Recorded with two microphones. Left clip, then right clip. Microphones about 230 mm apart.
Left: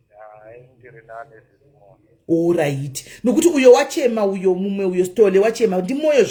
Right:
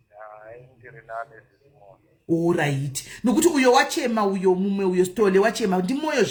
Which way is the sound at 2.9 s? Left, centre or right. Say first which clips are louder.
Left 4 dB; right.